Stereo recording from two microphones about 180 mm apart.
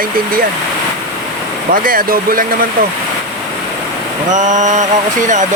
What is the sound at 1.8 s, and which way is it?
Speech, 50° right (ahead or behind).